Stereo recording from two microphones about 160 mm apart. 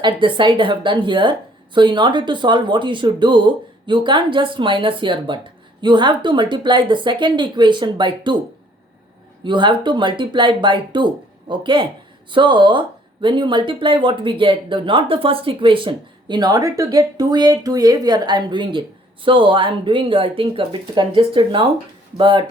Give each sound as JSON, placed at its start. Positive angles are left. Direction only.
{"t": 0.0, "sound": "a woman's voice", "side_deg": -30}
{"t": 9.4, "sound": "a woman's voice", "side_deg": -30}